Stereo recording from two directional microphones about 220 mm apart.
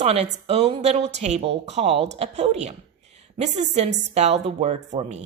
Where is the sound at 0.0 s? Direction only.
25° right (ahead or behind).